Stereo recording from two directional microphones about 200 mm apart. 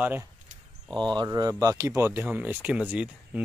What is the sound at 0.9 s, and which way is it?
Speech, 20° right (ahead or behind).